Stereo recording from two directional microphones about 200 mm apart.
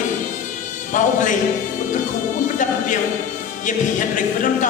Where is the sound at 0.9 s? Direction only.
40° left (ahead or behind).